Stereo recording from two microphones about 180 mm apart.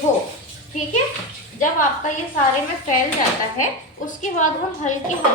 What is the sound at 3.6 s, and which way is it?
A woman's voice, 45° left (ahead or behind).